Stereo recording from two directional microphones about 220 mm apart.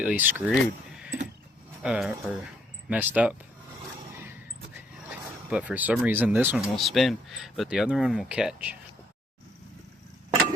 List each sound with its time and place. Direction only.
0.0 s speech: 5° right (ahead or behind)
0.5 s a sound: 5° right (ahead or behind)
1.8 s speech: 5° right (ahead or behind)
5.5 s speech: 5° right (ahead or behind)